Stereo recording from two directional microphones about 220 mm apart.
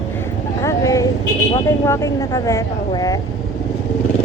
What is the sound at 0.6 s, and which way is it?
Vehicle, 15° left (ahead or behind).